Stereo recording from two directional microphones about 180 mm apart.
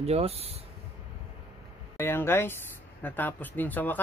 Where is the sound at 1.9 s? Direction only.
15° left (ahead or behind).